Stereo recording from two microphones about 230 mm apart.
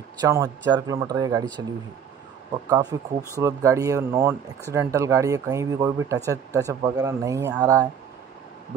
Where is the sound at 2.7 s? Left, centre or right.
Centre.